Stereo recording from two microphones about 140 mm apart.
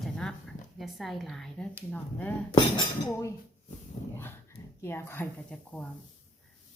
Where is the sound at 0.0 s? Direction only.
5° left (ahead or behind).